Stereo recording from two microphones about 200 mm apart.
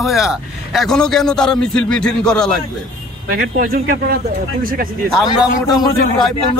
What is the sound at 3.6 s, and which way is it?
Speech, 45° right (ahead or behind).